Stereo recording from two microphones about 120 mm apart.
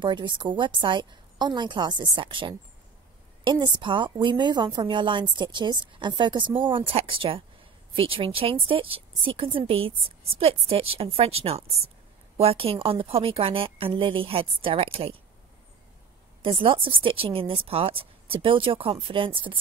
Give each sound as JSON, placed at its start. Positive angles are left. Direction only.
{"t": 0.0, "sound": "a woman's voice", "side_deg": -40}
{"t": 16.4, "sound": "speech", "side_deg": -50}